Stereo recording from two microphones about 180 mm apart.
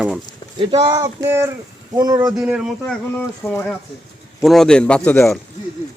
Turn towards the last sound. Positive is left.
turn(degrees=5)  # may be behind; listen again after turning